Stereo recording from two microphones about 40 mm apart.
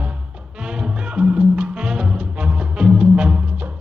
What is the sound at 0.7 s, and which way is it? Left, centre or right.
Music, right.